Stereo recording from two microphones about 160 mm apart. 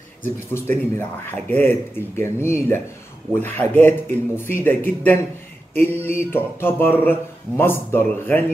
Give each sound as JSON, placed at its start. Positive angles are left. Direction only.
{"t": 0.2, "sound": "speech", "side_deg": 15}